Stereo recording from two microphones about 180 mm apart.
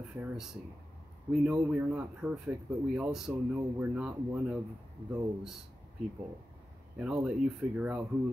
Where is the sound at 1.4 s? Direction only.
10° right (ahead or behind).